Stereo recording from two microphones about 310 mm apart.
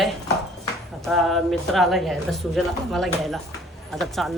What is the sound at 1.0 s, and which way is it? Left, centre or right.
Speech, centre.